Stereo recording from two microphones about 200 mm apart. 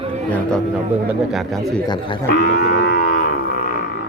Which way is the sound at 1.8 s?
20° left (ahead or behind).